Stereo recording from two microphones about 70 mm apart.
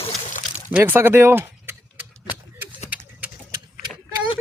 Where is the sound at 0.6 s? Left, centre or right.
Right.